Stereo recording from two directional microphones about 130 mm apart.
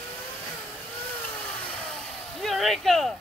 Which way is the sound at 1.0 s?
10° left (ahead or behind).